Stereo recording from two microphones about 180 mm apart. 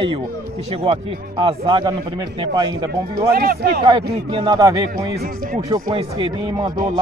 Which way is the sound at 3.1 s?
60° right (ahead or behind).